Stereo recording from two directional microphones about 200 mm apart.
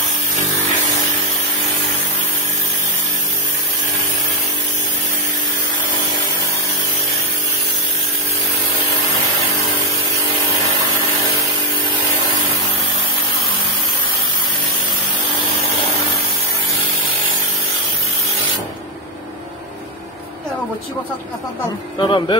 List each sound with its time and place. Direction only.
22.0 s speech: 25° left (ahead or behind)